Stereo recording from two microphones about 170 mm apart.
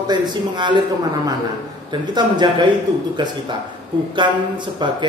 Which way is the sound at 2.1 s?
25° right (ahead or behind).